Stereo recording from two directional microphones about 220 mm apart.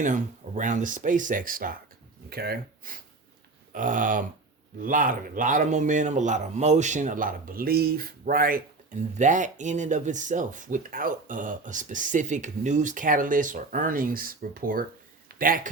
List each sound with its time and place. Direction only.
0.0 s speech: 35° right (ahead or behind)